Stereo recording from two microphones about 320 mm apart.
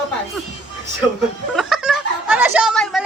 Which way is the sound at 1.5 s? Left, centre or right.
Centre.